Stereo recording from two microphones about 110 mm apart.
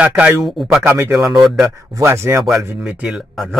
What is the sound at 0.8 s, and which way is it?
Speech, 25° right (ahead or behind).